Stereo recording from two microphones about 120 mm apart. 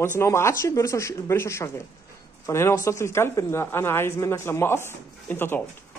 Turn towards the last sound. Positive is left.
turn(degrees=20)  # may be behind; listen again after turning